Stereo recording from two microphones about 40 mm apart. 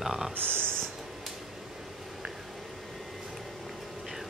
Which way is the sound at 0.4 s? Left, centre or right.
Right.